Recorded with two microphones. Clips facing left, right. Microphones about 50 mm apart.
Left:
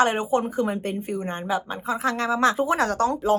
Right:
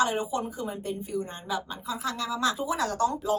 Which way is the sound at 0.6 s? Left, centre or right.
Left.